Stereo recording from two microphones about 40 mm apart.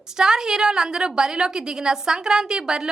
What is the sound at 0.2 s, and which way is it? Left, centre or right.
A woman's voice, centre.